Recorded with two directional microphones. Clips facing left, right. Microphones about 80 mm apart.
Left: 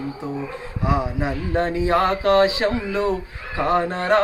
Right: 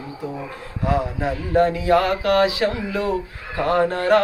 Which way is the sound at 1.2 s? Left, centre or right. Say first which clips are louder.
Right 4 dB; left.